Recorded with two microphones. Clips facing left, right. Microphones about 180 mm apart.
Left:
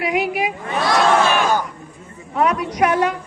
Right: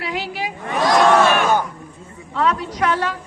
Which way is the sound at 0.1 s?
15° left (ahead or behind).